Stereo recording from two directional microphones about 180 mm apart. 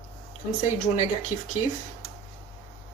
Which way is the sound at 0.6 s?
35° left (ahead or behind).